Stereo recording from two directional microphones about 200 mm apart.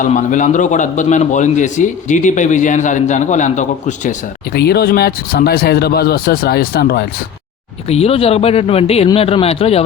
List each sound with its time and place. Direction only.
0.0 s a man's voice: 40° left (ahead or behind)
4.5 s speech: 55° left (ahead or behind)
7.9 s a man's voice: 30° left (ahead or behind)